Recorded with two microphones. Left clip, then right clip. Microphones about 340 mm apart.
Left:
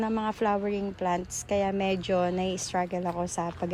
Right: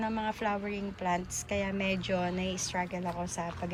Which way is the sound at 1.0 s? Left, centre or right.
Left.